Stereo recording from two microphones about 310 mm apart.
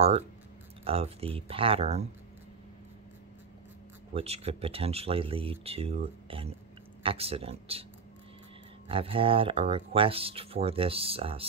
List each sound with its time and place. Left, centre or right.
0.8 s speech: centre
4.1 s speech: centre
8.8 s speech: centre